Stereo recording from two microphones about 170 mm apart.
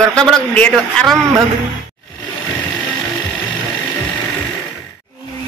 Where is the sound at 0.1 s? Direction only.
5° left (ahead or behind).